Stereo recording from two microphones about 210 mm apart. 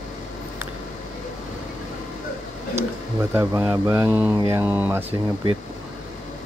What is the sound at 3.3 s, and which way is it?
Speech, 10° right (ahead or behind).